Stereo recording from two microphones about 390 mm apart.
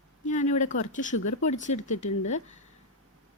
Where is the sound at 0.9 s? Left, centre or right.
Centre.